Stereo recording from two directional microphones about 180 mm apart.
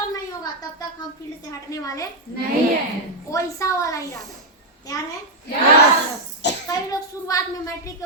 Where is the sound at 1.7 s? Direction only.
20° left (ahead or behind).